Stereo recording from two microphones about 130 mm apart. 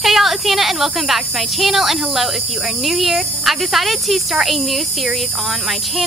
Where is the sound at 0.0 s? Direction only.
Centre (ahead or behind).